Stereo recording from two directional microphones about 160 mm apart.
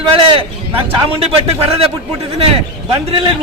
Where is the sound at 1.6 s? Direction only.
40° right (ahead or behind).